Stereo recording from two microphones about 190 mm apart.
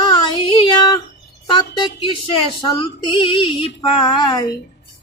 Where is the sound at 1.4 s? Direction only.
25° left (ahead or behind).